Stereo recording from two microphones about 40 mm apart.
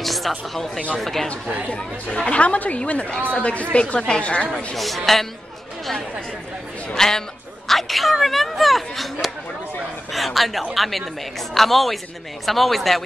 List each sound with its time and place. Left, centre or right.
0.0 s speech: centre
1.7 s speech: left
2.4 s a woman's voice: left
4.7 s speech: centre
6.9 s a sound: centre
10.1 s a woman's voice: centre